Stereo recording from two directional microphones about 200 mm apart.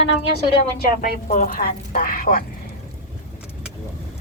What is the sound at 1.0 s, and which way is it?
A woman's voice, 45° left (ahead or behind).